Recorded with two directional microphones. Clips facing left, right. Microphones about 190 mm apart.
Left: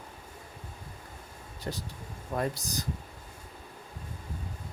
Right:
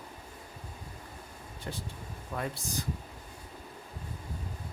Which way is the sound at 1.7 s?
40° left (ahead or behind).